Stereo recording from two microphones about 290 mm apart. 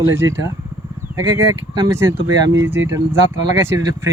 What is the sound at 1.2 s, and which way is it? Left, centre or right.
Speech, right.